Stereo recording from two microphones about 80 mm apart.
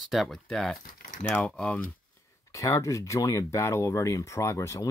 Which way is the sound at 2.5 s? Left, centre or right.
Left.